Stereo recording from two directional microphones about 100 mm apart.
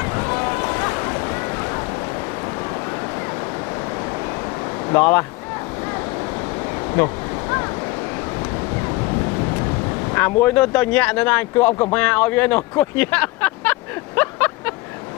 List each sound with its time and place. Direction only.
0.0 s boat: 25° left (ahead or behind)
4.9 s speech: 20° left (ahead or behind)
7.0 s waves: 25° left (ahead or behind)
10.1 s speech: 20° left (ahead or behind)
11.9 s vehicle: 15° left (ahead or behind)